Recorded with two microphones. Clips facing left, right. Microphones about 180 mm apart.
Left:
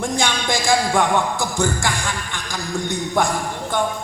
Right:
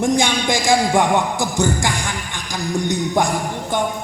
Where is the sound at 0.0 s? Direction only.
15° right (ahead or behind).